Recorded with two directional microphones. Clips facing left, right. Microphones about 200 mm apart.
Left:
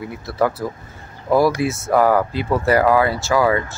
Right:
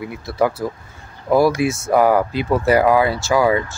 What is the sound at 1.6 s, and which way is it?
Speech, 15° right (ahead or behind).